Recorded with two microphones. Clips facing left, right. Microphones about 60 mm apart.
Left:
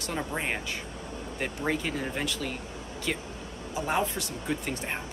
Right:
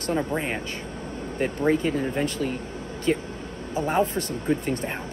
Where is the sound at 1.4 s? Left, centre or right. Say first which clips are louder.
Right 8 dB; right.